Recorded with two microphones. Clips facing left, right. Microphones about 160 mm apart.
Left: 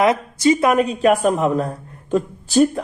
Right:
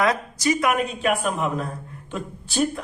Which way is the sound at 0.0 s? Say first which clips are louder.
Left 6 dB; 25° left (ahead or behind).